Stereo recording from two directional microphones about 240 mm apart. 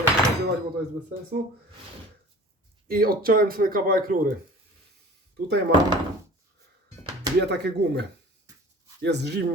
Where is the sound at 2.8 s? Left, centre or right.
Right.